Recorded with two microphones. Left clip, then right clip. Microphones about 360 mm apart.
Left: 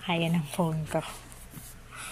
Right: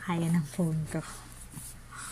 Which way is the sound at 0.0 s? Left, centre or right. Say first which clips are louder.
Left 4 dB; left.